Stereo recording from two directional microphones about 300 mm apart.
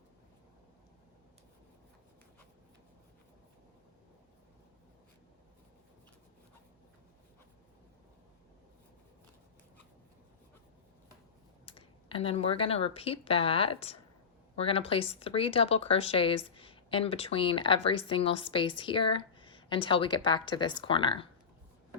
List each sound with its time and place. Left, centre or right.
11.6 s speech: centre